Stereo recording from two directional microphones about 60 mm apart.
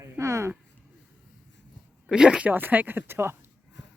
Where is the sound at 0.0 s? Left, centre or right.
Right.